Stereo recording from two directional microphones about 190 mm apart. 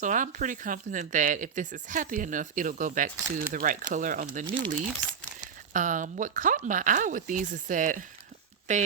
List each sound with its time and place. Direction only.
0.0 s speech: 40° right (ahead or behind)
5.7 s speech: 45° right (ahead or behind)